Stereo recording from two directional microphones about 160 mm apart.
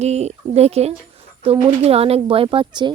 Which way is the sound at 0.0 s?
45° right (ahead or behind).